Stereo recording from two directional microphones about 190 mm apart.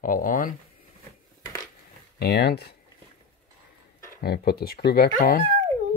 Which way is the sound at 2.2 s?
55° left (ahead or behind).